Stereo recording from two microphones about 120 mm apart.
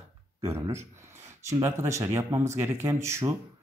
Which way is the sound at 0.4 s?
20° right (ahead or behind).